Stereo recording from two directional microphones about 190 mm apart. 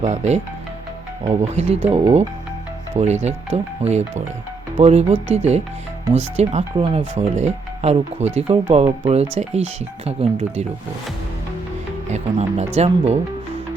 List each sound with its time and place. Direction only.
0.0 s speech: 35° right (ahead or behind)
12.0 s speech: 35° right (ahead or behind)